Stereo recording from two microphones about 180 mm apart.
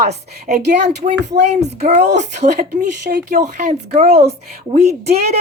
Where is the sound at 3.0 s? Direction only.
60° right (ahead or behind).